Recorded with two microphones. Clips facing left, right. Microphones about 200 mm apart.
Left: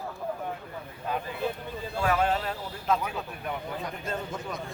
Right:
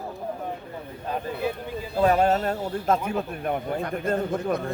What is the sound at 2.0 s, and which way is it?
Speech, 40° right (ahead or behind).